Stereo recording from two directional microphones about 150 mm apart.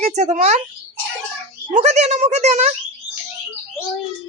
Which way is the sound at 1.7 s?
50° right (ahead or behind).